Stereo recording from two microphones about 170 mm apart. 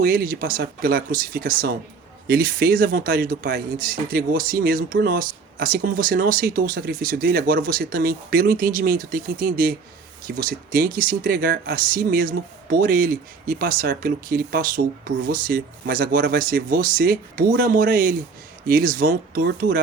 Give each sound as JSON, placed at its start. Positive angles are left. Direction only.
{"t": 0.0, "sound": "speech", "side_deg": -55}